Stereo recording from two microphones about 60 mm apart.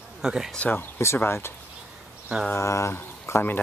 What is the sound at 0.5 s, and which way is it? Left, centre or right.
Speech, left.